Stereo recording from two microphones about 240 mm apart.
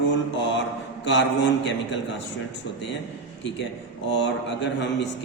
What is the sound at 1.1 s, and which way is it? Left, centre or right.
Speech, left.